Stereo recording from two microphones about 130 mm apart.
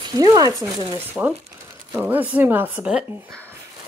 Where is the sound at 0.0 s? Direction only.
30° right (ahead or behind); by 3.2 s 10° right (ahead or behind).